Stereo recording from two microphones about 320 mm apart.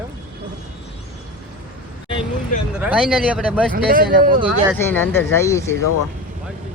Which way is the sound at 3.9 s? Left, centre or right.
Right.